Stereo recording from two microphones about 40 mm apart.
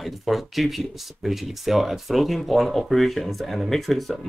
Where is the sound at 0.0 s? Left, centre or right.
Centre.